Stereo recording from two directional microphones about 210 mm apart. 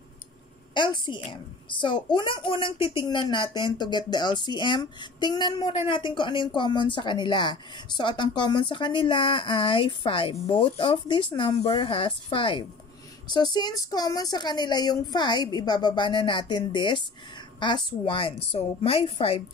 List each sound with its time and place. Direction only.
0.7 s speech: 20° left (ahead or behind)